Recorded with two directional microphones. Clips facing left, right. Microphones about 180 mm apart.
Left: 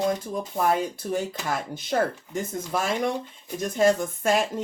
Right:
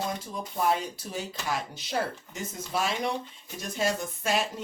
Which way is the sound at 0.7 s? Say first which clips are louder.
Left 5 dB; 50° left (ahead or behind).